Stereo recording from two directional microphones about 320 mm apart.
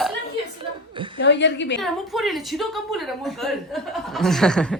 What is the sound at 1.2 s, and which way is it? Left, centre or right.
Speech, left.